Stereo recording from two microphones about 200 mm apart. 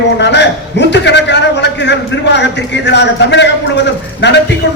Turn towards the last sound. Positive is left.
turn(degrees=65)  # may be behind; listen again after turning